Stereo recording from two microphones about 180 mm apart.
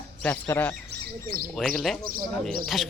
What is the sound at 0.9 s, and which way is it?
Speech, 55° right (ahead or behind).